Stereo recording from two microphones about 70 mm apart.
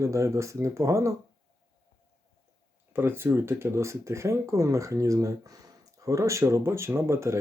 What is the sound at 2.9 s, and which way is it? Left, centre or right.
Speech, right.